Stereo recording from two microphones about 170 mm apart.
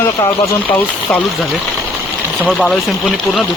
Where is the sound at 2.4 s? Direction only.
5° left (ahead or behind).